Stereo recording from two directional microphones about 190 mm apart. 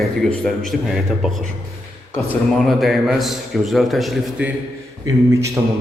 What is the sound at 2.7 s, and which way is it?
A man's voice, centre (ahead or behind).